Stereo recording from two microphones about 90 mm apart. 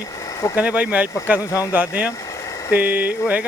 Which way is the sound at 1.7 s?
20° right (ahead or behind).